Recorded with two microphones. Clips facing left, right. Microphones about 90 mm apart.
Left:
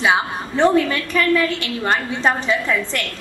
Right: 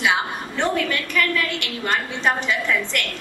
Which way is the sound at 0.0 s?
35° left (ahead or behind).